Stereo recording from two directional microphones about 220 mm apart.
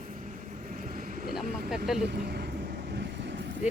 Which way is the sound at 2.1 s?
45° right (ahead or behind).